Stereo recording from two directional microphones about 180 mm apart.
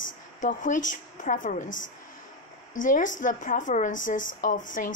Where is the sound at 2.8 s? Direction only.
45° left (ahead or behind).